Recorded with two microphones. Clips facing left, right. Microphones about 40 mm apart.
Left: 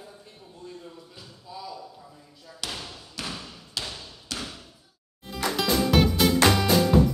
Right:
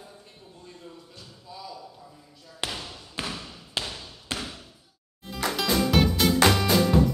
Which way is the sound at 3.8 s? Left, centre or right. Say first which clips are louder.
Right 1 dB; centre.